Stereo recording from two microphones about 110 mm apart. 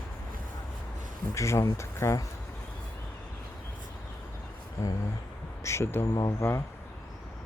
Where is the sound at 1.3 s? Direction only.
25° left (ahead or behind).